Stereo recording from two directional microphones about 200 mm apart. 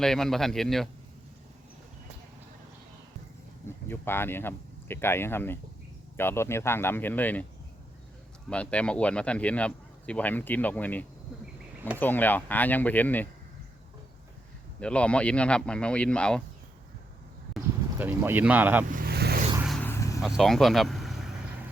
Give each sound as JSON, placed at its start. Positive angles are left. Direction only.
{"t": 0.0, "sound": "speech", "side_deg": 0}
{"t": 3.8, "sound": "speech", "side_deg": 10}
{"t": 8.4, "sound": "speech", "side_deg": 5}
{"t": 14.8, "sound": "speech", "side_deg": 5}
{"t": 17.9, "sound": "speech", "side_deg": -10}
{"t": 18.9, "sound": "vehicle", "side_deg": -45}
{"t": 19.6, "sound": "vehicle", "side_deg": 0}
{"t": 19.9, "sound": "vehicle", "side_deg": 15}
{"t": 20.2, "sound": "speech", "side_deg": 0}